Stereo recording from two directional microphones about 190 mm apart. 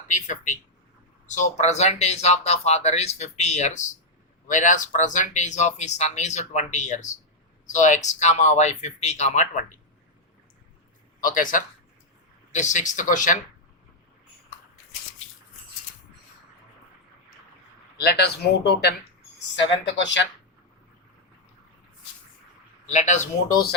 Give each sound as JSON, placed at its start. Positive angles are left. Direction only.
{"t": 0.1, "sound": "speech", "side_deg": 40}
{"t": 11.2, "sound": "a man's voice", "side_deg": 45}
{"t": 17.9, "sound": "speech", "side_deg": 60}
{"t": 19.5, "sound": "speech", "side_deg": 75}
{"t": 22.9, "sound": "speech", "side_deg": 40}